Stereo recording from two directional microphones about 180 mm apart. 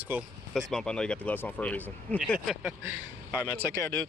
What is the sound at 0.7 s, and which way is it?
Speech, 5° left (ahead or behind).